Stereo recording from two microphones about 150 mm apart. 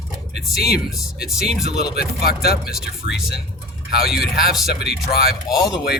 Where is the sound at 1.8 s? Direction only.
90° left.